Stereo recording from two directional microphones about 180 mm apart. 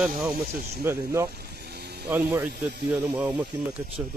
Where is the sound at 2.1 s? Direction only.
10° right (ahead or behind).